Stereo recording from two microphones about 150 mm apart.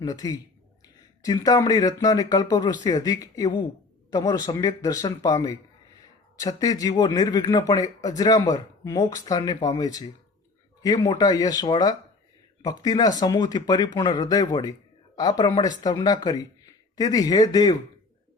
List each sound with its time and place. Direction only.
0.0 s speech: 25° left (ahead or behind)
6.6 s speech: 25° left (ahead or behind)